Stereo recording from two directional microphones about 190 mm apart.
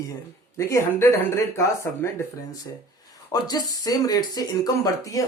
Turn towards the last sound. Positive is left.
turn(degrees=15)  # may be behind; listen again after turning